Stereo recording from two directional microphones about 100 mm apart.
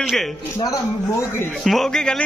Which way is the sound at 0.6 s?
35° left (ahead or behind).